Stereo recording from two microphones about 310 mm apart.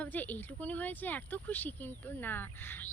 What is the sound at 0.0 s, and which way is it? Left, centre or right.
A woman's voice, centre.